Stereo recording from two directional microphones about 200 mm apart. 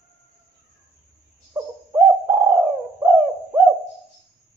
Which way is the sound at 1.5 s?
15° right (ahead or behind).